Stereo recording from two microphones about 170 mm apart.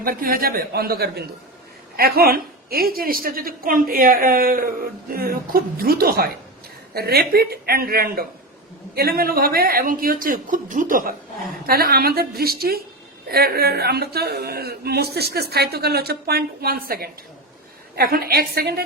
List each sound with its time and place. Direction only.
0.0 s a woman's voice: 60° right (ahead or behind)